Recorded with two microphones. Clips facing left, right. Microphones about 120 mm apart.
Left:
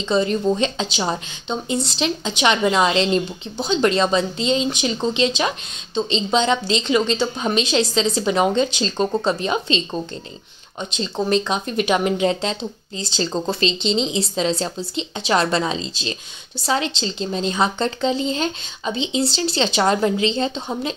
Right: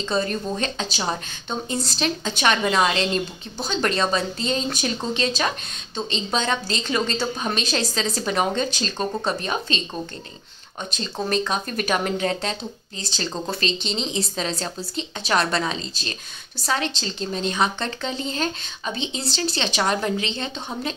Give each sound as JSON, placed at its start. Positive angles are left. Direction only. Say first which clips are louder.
{"t": 0.1, "sound": "speech", "louder": "left 7 dB", "side_deg": 25}
{"t": 11.0, "sound": "speech", "louder": "left 4 dB", "side_deg": 25}